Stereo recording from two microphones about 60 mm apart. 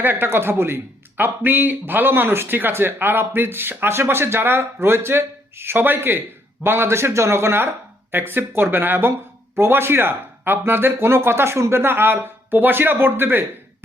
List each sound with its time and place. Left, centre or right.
0.0 s a man's voice: right